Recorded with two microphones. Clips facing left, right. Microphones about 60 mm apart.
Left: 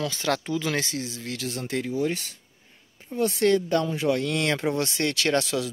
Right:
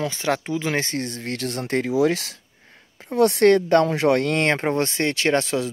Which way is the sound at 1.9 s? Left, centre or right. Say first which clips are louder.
Right 10 dB; right.